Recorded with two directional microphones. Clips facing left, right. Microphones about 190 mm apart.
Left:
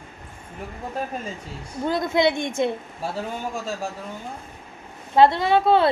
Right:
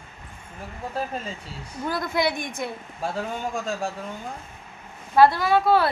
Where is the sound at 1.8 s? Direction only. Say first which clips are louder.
Left 4 dB; 20° left (ahead or behind).